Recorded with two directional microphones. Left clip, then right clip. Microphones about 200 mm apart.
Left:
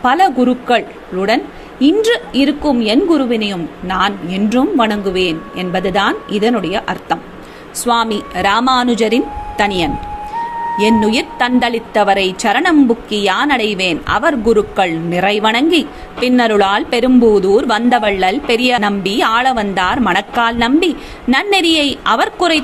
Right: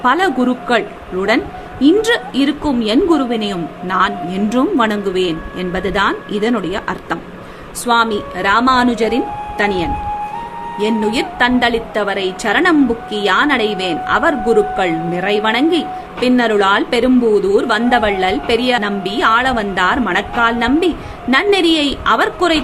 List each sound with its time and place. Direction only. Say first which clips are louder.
0.0 s a woman's voice: left 2 dB; 5° left (ahead or behind)